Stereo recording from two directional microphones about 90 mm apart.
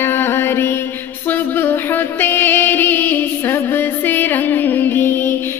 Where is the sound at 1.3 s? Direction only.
25° left (ahead or behind).